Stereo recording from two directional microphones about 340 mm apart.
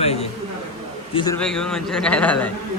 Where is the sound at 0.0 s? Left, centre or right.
Centre.